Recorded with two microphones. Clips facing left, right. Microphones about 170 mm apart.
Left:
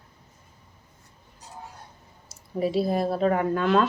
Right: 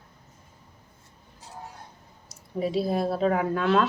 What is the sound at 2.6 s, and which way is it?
Speech, centre (ahead or behind).